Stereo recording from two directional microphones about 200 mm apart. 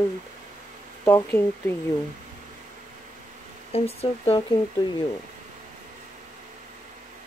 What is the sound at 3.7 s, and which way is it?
Speech, 30° left (ahead or behind).